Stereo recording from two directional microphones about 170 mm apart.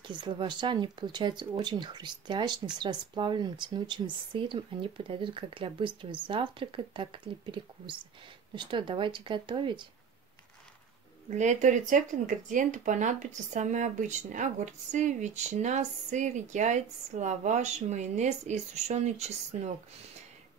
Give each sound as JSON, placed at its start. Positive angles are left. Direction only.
{"t": 0.0, "sound": "speech", "side_deg": -30}
{"t": 11.2, "sound": "speech", "side_deg": -45}